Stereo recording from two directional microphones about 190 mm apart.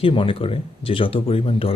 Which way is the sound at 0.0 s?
30° left (ahead or behind).